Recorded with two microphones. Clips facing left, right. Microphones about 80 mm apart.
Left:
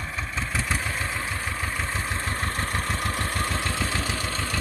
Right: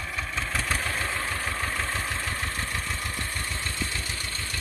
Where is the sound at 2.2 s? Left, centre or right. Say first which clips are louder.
Left 3 dB; left.